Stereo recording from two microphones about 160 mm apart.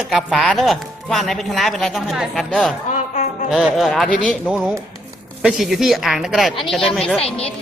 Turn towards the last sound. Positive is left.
turn(degrees=5)  # may be behind; listen again after turning